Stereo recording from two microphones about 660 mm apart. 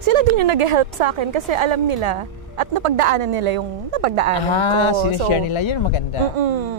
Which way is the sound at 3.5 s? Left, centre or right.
Right.